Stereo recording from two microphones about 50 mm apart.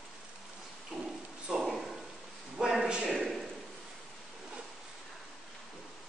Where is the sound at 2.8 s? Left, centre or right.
Right.